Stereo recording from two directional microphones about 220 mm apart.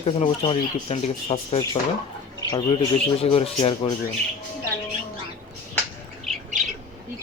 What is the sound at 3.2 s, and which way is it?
Speech, 25° left (ahead or behind).